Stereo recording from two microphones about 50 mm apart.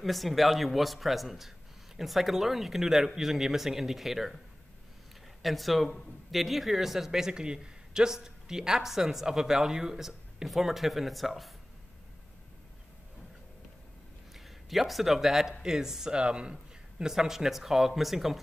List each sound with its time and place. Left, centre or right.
0.0 s a man's voice: centre
5.4 s a man's voice: centre
14.3 s a man's voice: centre